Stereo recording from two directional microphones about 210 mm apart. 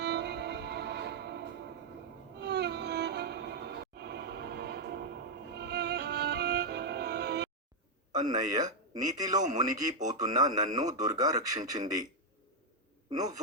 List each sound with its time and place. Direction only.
0.0 s music: 55° right (ahead or behind)
2.4 s music: 55° right (ahead or behind)
8.2 s a man's voice: 20° right (ahead or behind)